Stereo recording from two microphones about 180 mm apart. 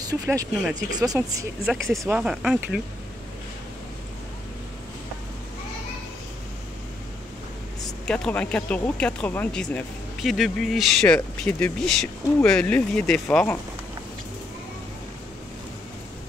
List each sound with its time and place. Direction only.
0.0 s speech: 20° right (ahead or behind)
1.7 s speech: centre (ahead or behind)
8.0 s speech: 5° left (ahead or behind)